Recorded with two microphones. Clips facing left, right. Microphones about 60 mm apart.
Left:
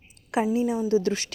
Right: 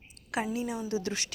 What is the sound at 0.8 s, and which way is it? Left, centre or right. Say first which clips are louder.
Speech: left 9 dB; left.